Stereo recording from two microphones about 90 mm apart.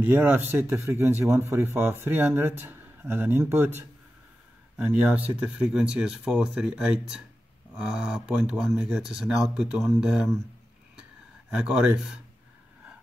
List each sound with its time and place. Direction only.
0.0 s a man's voice: 20° right (ahead or behind)